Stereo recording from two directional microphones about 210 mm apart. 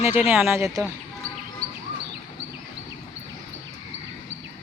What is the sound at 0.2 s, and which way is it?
Speech, 5° right (ahead or behind).